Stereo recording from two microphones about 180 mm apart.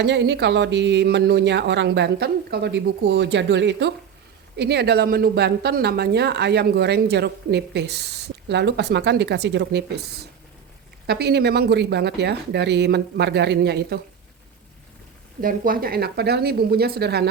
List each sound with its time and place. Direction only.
0.0 s speech: 75° right (ahead or behind)
4.5 s speech: 65° right (ahead or behind)
15.4 s speech: 50° right (ahead or behind)